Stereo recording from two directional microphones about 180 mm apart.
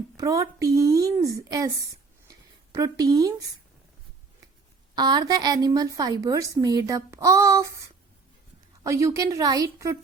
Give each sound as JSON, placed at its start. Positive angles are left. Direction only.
{"t": 0.2, "sound": "a woman's voice", "side_deg": -20}
{"t": 4.9, "sound": "a woman's voice", "side_deg": -25}
{"t": 8.8, "sound": "a woman's voice", "side_deg": -15}